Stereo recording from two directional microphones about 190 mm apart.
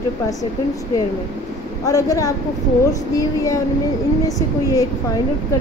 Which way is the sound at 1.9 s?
20° left (ahead or behind).